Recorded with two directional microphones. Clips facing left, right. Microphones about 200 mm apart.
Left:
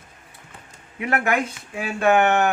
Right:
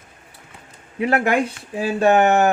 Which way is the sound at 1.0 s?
30° right (ahead or behind).